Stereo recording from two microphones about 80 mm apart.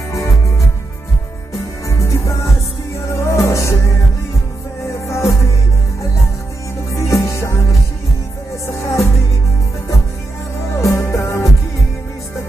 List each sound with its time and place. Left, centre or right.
1.9 s music: left
5.0 s music: left
6.9 s music: left
8.8 s music: left
10.8 s music: left